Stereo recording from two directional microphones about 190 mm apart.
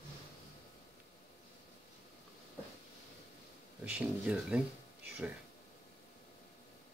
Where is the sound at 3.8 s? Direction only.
5° right (ahead or behind).